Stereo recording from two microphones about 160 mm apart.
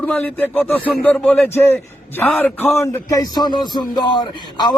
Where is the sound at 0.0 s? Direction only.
10° left (ahead or behind).